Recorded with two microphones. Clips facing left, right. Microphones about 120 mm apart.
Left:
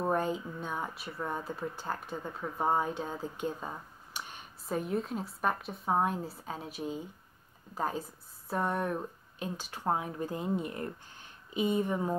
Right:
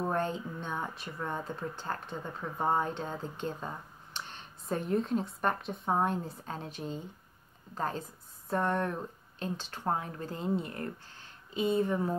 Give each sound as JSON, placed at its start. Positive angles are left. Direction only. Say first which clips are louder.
{"t": 0.0, "sound": "speech", "louder": "left 1 dB", "side_deg": 10}